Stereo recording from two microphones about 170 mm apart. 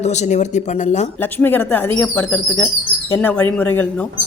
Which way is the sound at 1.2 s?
10° left (ahead or behind).